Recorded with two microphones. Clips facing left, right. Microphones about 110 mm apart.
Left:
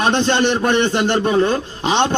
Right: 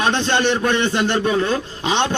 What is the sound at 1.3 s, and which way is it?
Speech, 30° left (ahead or behind).